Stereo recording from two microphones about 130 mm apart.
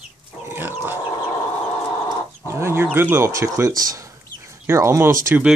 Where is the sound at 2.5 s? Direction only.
20° right (ahead or behind).